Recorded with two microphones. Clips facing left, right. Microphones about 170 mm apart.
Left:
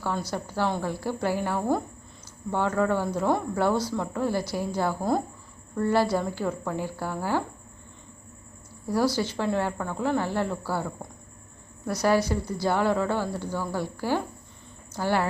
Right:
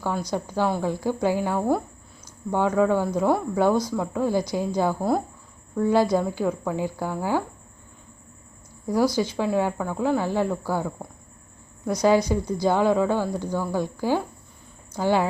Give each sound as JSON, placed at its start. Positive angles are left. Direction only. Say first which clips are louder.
{"t": 0.0, "sound": "a woman's voice", "louder": "right 3 dB", "side_deg": -15}
{"t": 8.9, "sound": "a woman's voice", "louder": "right 3 dB", "side_deg": -15}